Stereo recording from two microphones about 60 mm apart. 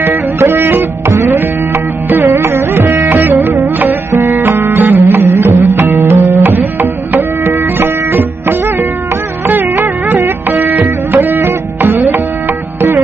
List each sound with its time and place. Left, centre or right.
0.0 s music: right